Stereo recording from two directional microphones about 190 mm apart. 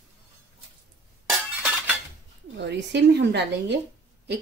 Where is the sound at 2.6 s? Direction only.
65° right (ahead or behind).